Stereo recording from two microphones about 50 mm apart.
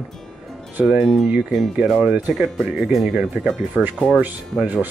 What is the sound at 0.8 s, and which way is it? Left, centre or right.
Speech, centre.